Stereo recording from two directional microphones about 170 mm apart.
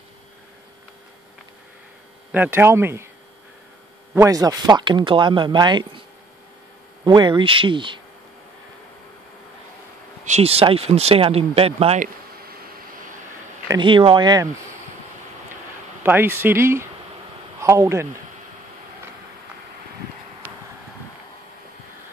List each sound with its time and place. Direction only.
2.3 s speech: 10° right (ahead or behind)
4.1 s speech: 20° right (ahead or behind)
7.1 s speech: 25° right (ahead or behind)
10.2 s speech: 40° right (ahead or behind)
13.7 s speech: 30° right (ahead or behind)
16.0 s speech: 15° right (ahead or behind)